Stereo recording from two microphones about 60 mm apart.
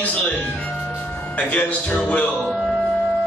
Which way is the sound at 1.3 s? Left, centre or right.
Left.